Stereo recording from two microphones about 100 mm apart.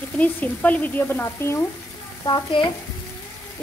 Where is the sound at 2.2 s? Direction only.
50° left (ahead or behind).